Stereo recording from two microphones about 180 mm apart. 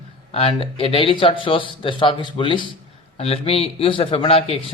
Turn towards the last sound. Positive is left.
turn(degrees=35)  # may be behind; listen again after turning